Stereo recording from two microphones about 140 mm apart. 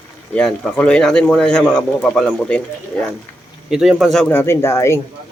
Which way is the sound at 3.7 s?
5° right (ahead or behind).